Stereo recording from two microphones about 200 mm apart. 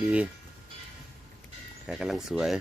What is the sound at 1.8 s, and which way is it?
Speech, 5° right (ahead or behind).